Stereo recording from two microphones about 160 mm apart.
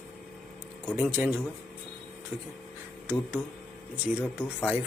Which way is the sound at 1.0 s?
10° right (ahead or behind).